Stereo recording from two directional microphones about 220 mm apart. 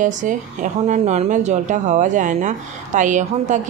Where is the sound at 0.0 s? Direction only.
35° right (ahead or behind).